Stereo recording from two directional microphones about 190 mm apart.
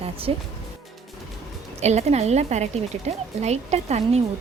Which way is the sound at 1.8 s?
35° right (ahead or behind).